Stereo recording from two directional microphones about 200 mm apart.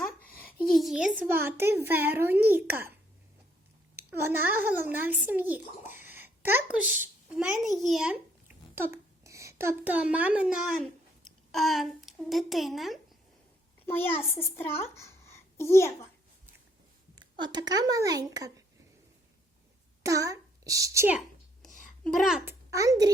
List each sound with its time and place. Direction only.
0.7 s a child's voice: centre (ahead or behind)
3.9 s a child's voice: 10° right (ahead or behind)
13.8 s a child's voice: 10° left (ahead or behind)
14.9 s a sound: 15° left (ahead or behind)
17.3 s speech: 20° right (ahead or behind)
20.0 s a child's voice: 15° right (ahead or behind)
21.7 s a sound: 40° left (ahead or behind)
22.0 s a child's voice: centre (ahead or behind)
22.7 s a child's voice: 15° right (ahead or behind)